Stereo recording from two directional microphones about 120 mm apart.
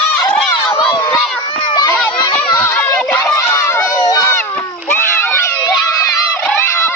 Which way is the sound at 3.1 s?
10° left (ahead or behind).